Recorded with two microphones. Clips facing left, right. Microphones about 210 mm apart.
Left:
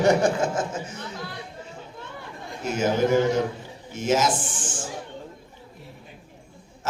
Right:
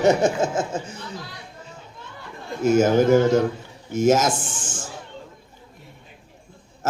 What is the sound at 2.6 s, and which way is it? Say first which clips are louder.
Speech: right 6 dB; 45° right (ahead or behind).